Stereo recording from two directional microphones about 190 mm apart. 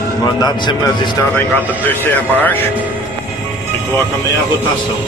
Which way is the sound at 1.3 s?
10° left (ahead or behind).